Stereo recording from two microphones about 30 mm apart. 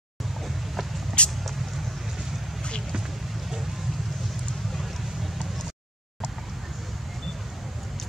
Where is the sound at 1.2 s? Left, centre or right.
Left.